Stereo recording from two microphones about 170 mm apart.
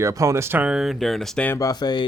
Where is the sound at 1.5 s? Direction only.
20° left (ahead or behind).